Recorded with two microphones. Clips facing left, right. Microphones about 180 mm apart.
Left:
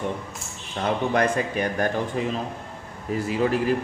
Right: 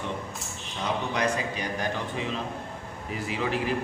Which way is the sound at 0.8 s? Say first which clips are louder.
Left 6 dB; 55° left (ahead or behind).